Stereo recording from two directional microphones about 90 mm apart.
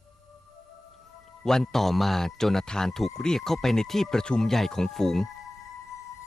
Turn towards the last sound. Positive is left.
turn(degrees=5)  # may be behind; listen again after turning